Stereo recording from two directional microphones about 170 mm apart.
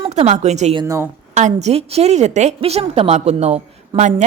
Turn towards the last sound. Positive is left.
turn(degrees=-40)  # may be behind; listen again after turning